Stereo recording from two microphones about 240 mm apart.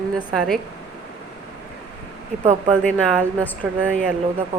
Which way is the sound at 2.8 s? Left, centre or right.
Centre.